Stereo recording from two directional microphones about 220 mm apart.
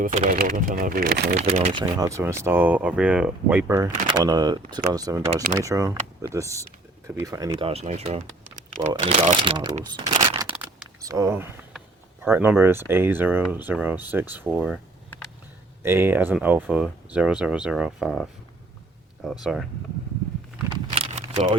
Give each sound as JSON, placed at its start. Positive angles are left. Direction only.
{"t": 0.0, "sound": "speech", "side_deg": -35}
{"t": 1.5, "sound": "speech", "side_deg": -30}
{"t": 1.8, "sound": "speech", "side_deg": -15}
{"t": 7.5, "sound": "speech", "side_deg": -25}
{"t": 9.8, "sound": "a sound", "side_deg": -20}
{"t": 10.5, "sound": "vehicle", "side_deg": -5}
{"t": 11.0, "sound": "speech", "side_deg": -15}
{"t": 15.8, "sound": "speech", "side_deg": -10}
{"t": 20.9, "sound": "a sound", "side_deg": -30}